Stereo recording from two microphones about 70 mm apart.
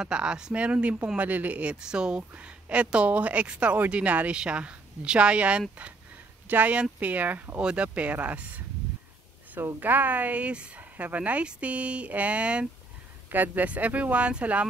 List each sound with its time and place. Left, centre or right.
0.0 s speech: centre
9.8 s speech: right